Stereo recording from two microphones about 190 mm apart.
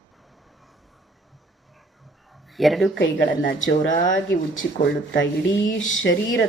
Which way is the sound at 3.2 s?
50° left (ahead or behind).